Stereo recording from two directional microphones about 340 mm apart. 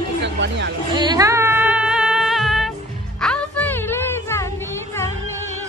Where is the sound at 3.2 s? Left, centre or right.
Centre.